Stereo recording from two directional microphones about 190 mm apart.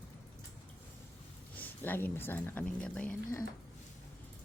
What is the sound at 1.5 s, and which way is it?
Speech, 10° left (ahead or behind).